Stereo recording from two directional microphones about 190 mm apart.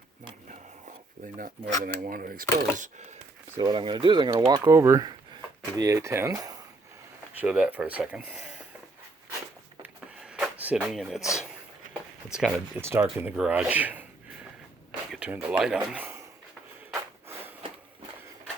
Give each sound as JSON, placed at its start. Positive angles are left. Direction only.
{"t": 1.8, "sound": "speech", "side_deg": -50}
{"t": 3.5, "sound": "speech", "side_deg": -25}
{"t": 7.3, "sound": "speech", "side_deg": -5}
{"t": 9.8, "sound": "a sound", "side_deg": -5}
{"t": 12.3, "sound": "speech", "side_deg": 0}
{"t": 12.8, "sound": "speech", "side_deg": -15}
{"t": 15.1, "sound": "speech", "side_deg": -5}
{"t": 16.9, "sound": "snort", "side_deg": -15}